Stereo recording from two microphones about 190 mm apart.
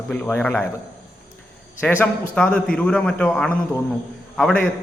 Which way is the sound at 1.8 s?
10° left (ahead or behind).